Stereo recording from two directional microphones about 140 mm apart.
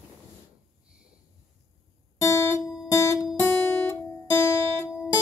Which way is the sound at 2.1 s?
20° left (ahead or behind).